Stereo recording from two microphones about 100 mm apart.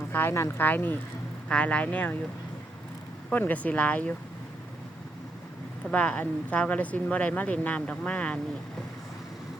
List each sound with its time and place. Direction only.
0.1 s speech: 20° left (ahead or behind)
3.3 s speech: 15° left (ahead or behind)
5.9 s speech: 15° left (ahead or behind)